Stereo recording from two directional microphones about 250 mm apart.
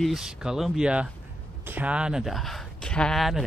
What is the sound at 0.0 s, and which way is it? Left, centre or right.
Speech, centre.